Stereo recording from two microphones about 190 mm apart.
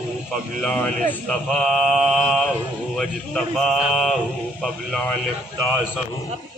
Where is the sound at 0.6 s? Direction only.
5° left (ahead or behind).